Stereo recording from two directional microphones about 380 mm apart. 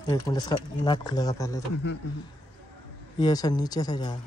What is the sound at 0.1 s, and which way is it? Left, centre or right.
Speech, centre.